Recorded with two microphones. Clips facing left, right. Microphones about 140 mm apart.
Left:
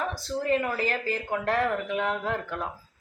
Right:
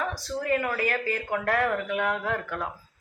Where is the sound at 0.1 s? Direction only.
25° left (ahead or behind).